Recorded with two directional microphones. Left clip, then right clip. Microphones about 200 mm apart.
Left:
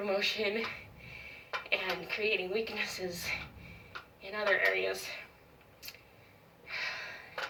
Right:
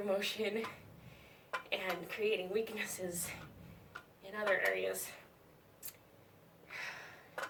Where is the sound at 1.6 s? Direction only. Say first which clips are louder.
Left 6 dB; 15° right (ahead or behind).